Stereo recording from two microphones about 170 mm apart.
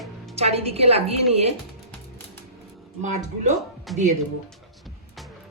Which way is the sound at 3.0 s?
45° right (ahead or behind).